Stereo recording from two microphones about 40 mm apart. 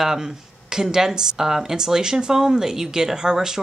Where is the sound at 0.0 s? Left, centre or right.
Centre.